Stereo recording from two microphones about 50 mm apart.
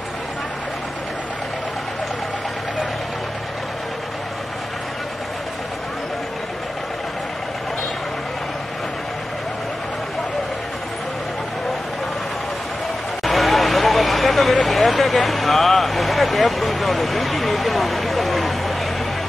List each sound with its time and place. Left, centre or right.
13.2 s vehicle: centre